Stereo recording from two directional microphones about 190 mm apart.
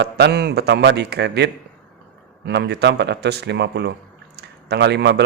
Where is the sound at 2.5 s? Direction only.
60° right (ahead or behind).